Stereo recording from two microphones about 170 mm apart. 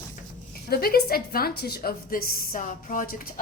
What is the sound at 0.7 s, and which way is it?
A woman's voice, 60° left (ahead or behind).